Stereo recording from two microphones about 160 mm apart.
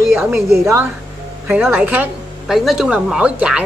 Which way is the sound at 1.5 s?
10° right (ahead or behind).